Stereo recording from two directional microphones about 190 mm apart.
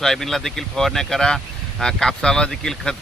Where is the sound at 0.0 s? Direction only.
Centre (ahead or behind).